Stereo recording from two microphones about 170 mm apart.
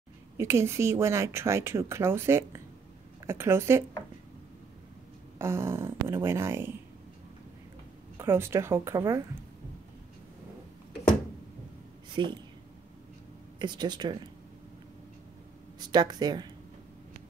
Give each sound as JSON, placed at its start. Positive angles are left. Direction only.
{"t": 0.4, "sound": "speech", "side_deg": -15}
{"t": 5.4, "sound": "speech", "side_deg": -15}
{"t": 8.2, "sound": "speech", "side_deg": -15}
{"t": 12.1, "sound": "a woman's voice", "side_deg": -25}
{"t": 13.6, "sound": "speech", "side_deg": -25}
{"t": 15.8, "sound": "speech", "side_deg": -25}